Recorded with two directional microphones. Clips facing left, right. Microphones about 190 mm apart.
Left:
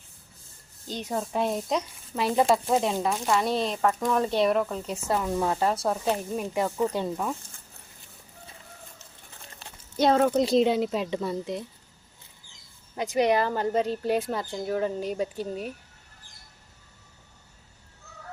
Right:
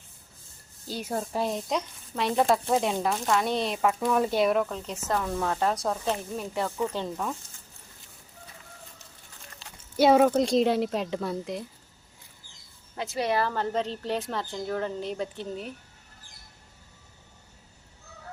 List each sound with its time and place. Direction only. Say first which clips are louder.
0.9 s speech: left 1 dB; 5° right (ahead or behind)
9.6 s a sound: left 2 dB; 55° left (ahead or behind)
10.0 s speech: right 2 dB; 10° right (ahead or behind)
10.4 s speech: left 1 dB; centre (ahead or behind)
13.0 s speech: left 4 dB; 15° left (ahead or behind)